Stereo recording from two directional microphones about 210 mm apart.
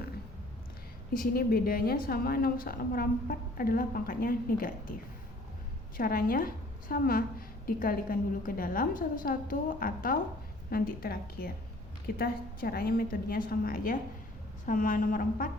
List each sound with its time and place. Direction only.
1.1 s a woman's voice: 45° left (ahead or behind)
6.0 s a woman's voice: 45° left (ahead or behind)